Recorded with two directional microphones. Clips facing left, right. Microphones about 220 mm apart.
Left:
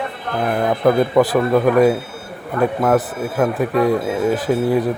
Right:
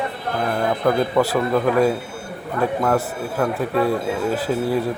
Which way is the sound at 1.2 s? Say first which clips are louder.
Left 4 dB; 15° left (ahead or behind).